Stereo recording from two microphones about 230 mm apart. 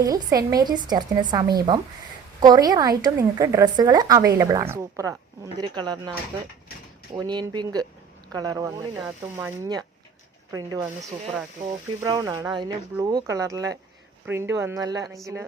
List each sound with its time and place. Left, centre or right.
0.0 s a woman's voice: centre
12.0 s a woman's voice: centre